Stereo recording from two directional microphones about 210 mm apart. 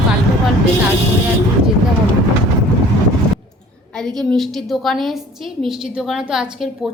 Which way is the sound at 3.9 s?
Centre (ahead or behind).